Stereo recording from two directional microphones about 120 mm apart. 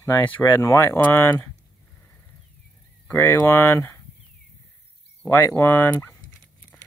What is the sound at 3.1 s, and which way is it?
Speech, 20° left (ahead or behind).